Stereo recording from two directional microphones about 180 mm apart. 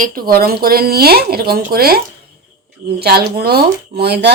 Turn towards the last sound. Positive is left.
turn(degrees=-65)  # may be behind; listen again after turning